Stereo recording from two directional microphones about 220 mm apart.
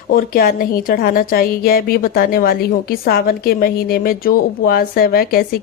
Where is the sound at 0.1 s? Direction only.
40° left (ahead or behind).